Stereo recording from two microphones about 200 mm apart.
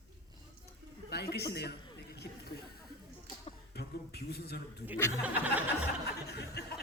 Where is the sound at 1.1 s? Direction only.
55° left (ahead or behind).